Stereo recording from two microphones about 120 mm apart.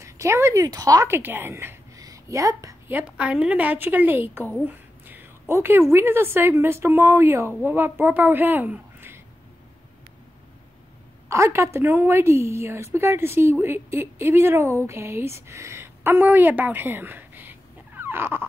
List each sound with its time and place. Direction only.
0.0 s speech: 25° right (ahead or behind)
1.1 s a woman's voice: 20° right (ahead or behind)
2.9 s a woman's voice: 10° right (ahead or behind)
11.2 s a woman's voice: 25° right (ahead or behind)